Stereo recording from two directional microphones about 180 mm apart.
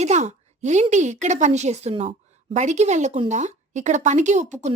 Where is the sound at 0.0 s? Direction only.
40° right (ahead or behind).